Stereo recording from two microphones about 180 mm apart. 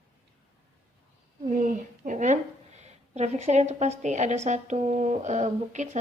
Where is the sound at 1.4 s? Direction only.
45° right (ahead or behind).